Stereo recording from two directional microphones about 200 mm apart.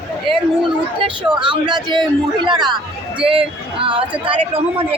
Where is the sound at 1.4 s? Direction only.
25° right (ahead or behind).